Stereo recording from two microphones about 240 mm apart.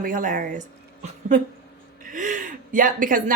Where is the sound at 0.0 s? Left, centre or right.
Right.